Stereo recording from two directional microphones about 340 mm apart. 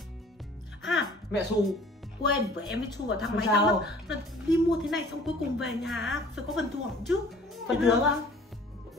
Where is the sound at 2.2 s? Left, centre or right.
Left.